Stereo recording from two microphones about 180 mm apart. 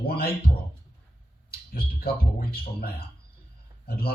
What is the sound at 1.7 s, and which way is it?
Speech, 55° left (ahead or behind).